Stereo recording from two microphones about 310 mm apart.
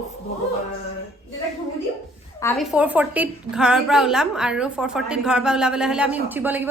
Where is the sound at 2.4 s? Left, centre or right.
Centre.